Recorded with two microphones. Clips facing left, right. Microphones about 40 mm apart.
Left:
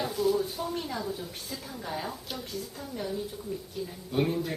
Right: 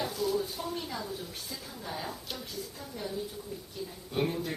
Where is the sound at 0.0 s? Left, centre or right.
Centre.